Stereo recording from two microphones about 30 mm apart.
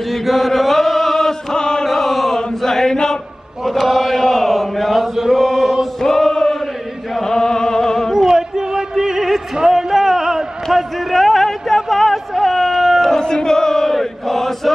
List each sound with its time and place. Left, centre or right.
0.1 s chant: centre
1.5 s chant: left
1.9 s chant: centre
2.6 s chant: centre
3.8 s chant: centre
6.0 s chant: centre
7.2 s music: centre
8.1 s music: centre
8.4 s a sound: centre
13.2 s chant: left
13.9 s chant: centre